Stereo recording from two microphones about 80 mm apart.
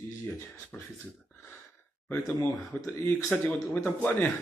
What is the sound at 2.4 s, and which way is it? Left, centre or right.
Speech, left.